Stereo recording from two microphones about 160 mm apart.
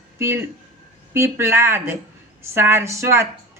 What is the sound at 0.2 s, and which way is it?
Speech, 15° right (ahead or behind).